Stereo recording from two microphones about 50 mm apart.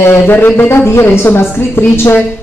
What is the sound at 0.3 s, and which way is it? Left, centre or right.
A woman's voice, left.